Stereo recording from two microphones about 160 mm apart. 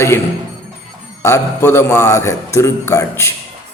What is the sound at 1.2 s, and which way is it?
A man's voice, 15° left (ahead or behind).